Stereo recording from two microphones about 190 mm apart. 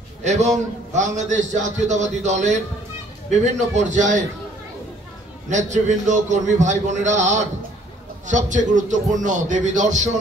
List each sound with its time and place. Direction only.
0.2 s a man's voice: 35° right (ahead or behind)
5.5 s a man's voice: 40° right (ahead or behind)